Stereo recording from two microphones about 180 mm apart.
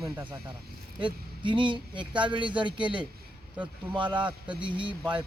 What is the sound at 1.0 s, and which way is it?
Speech, 25° right (ahead or behind).